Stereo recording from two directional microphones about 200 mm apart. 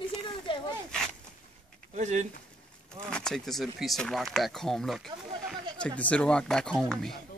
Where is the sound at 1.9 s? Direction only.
35° right (ahead or behind).